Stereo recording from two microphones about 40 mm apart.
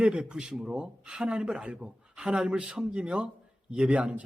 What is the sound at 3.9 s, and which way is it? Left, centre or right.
Speech, right.